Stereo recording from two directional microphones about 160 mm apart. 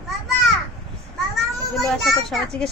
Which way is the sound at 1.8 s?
Centre (ahead or behind).